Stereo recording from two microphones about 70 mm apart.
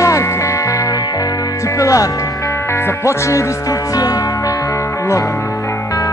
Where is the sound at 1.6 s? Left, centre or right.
Left.